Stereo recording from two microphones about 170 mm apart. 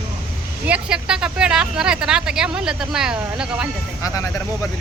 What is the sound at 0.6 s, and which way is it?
Speech, 5° right (ahead or behind).